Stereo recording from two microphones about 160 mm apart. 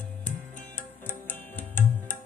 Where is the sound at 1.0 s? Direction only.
10° left (ahead or behind).